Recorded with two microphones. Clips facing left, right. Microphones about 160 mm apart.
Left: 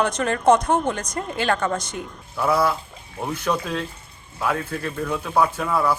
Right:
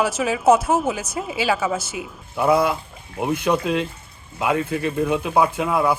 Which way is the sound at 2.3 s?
20° right (ahead or behind).